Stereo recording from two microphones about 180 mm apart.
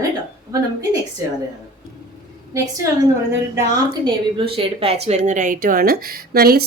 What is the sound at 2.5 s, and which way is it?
A woman's voice, 20° right (ahead or behind).